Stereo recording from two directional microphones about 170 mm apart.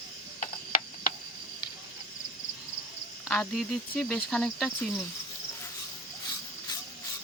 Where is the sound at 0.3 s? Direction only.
50° left (ahead or behind).